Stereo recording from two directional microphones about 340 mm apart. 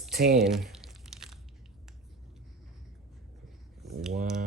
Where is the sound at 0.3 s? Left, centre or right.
Centre.